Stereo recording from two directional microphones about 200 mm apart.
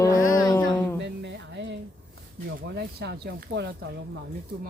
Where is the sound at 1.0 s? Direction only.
65° right (ahead or behind).